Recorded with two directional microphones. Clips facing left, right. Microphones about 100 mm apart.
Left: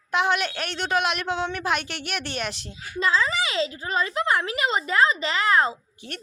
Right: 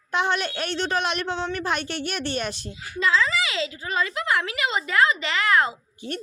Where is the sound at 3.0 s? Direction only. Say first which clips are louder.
Right 1 dB; 35° left (ahead or behind).